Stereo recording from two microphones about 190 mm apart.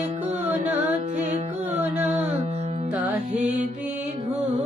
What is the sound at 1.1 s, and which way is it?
Music, 40° right (ahead or behind).